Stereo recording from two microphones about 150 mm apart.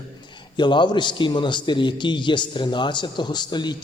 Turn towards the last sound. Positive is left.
turn(degrees=30)  # may be behind; listen again after turning